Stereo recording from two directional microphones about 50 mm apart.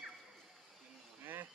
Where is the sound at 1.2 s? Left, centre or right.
Right.